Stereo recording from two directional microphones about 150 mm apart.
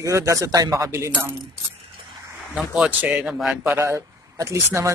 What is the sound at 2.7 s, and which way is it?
Speech, 10° right (ahead or behind).